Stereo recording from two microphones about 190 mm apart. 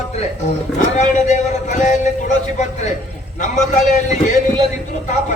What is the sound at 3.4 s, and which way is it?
Speech, 40° left (ahead or behind).